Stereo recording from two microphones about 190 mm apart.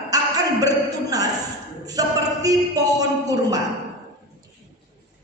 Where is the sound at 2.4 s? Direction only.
20° right (ahead or behind).